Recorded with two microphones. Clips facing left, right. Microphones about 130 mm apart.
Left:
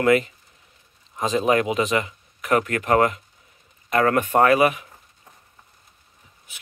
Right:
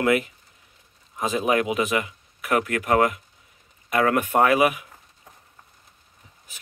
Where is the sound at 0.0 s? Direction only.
10° right (ahead or behind).